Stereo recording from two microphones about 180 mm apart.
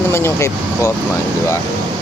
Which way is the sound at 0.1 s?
15° left (ahead or behind).